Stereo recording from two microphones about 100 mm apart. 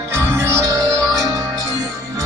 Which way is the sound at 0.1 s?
25° right (ahead or behind).